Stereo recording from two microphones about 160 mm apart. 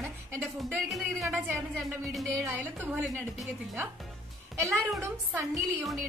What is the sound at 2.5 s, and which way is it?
Speech, 15° right (ahead or behind).